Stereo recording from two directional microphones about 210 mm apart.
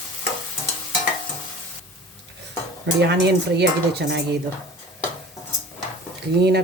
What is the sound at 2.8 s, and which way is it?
Speech, 55° right (ahead or behind).